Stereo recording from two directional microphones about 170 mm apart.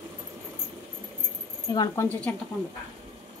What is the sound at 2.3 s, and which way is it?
Speech, 10° left (ahead or behind).